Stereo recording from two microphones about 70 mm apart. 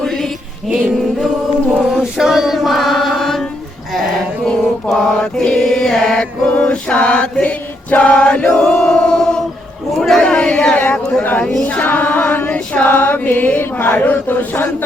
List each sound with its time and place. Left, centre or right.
0.0 s music: centre
1.9 s chant: centre
4.4 s mantra: centre
6.5 s choir: centre
8.2 s chant: centre
9.9 s a sound: centre
11.2 s speech: left
11.6 s chant: left